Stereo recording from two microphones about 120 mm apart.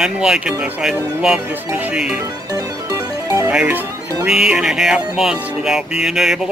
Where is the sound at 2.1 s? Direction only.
30° right (ahead or behind).